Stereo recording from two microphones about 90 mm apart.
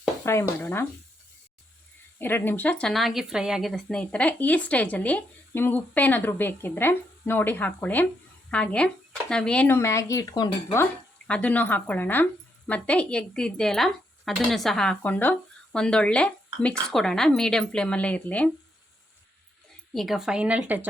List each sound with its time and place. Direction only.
0.3 s speech: 25° left (ahead or behind)
2.1 s speech: 25° left (ahead or behind)
2.9 s a woman's voice: centre (ahead or behind)
4.0 s speech: 15° left (ahead or behind)
9.6 s speech: 30° left (ahead or behind); by 10.5 s 45° left (ahead or behind)
11.3 s speech: 15° left (ahead or behind)
15.0 s speech: 20° left (ahead or behind)
19.9 s speech: centre (ahead or behind); by 20.8 s 15° right (ahead or behind)